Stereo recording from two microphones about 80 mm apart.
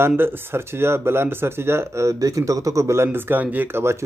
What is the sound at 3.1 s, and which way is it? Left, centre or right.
Speech, right.